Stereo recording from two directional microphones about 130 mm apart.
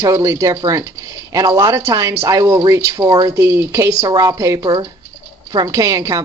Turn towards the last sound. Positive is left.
turn(degrees=-25)  # may be behind; listen again after turning